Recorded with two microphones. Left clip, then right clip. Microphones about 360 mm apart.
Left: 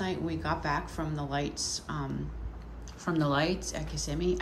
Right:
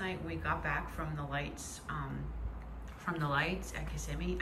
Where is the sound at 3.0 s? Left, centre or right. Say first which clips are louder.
Left 5 dB; centre.